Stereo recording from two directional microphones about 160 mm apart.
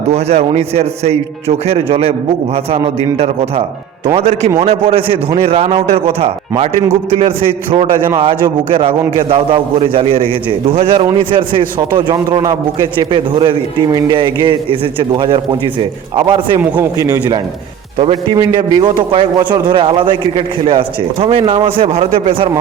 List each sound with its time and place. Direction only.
0.1 s a man's voice: 40° right (ahead or behind)
16.6 s a man's voice: 15° right (ahead or behind)
17.9 s a man's voice: 35° right (ahead or behind)